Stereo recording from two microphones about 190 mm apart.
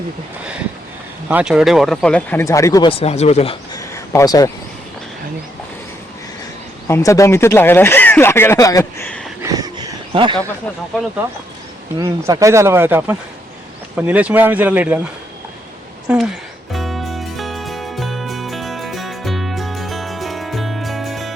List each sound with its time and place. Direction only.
1.3 s speech: 5° right (ahead or behind); by 2.9 s 15° left (ahead or behind)
3.0 s speech: 35° left (ahead or behind)
3.8 s a sound: 15° left (ahead or behind)
6.8 s speech: 15° left (ahead or behind)
9.4 s a sound: 20° right (ahead or behind)
11.9 s speech: 20° right (ahead or behind)
16.0 s speech: 5° right (ahead or behind)
16.7 s music: centre (ahead or behind)